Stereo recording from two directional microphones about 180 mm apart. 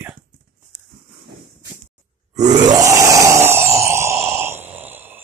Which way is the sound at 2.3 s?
20° right (ahead or behind).